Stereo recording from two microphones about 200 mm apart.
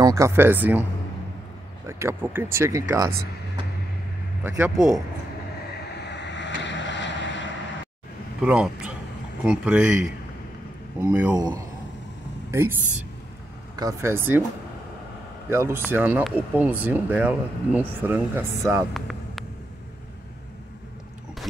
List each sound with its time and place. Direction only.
0.0 s speech: 15° right (ahead or behind)
1.9 s speech: 15° right (ahead or behind)
4.4 s speech: 10° right (ahead or behind)
6.0 s vehicle: 60° left (ahead or behind)
8.4 s a man's voice: 5° right (ahead or behind)
11.3 s speech: 20° right (ahead or behind)
13.7 s speech: 15° right (ahead or behind)
15.5 s speech: 10° right (ahead or behind)
18.9 s vehicle: centre (ahead or behind)